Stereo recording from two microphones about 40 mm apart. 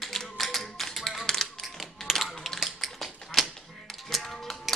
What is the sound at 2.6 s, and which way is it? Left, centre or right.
Tap, centre.